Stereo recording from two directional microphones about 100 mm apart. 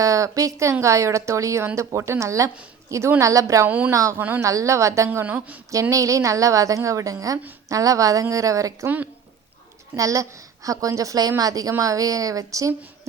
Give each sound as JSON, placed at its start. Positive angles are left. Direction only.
{"t": 0.0, "sound": "a woman's voice", "side_deg": -35}
{"t": 3.7, "sound": "a woman's voice", "side_deg": -15}
{"t": 4.4, "sound": "a woman's voice", "side_deg": -30}
{"t": 5.2, "sound": "a woman's voice", "side_deg": -15}
{"t": 5.9, "sound": "a woman's voice", "side_deg": -35}
{"t": 9.9, "sound": "a woman's voice", "side_deg": -35}